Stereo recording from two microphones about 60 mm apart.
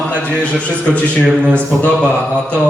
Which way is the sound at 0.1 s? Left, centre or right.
Left.